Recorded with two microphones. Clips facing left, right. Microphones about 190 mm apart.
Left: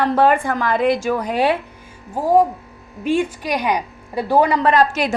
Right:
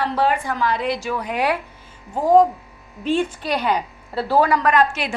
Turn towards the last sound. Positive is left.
turn(degrees=40)  # may be behind; listen again after turning